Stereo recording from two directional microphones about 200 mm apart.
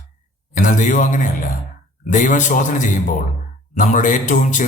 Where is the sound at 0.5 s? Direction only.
40° left (ahead or behind).